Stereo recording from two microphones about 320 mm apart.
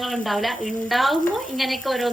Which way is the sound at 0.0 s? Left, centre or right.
Centre.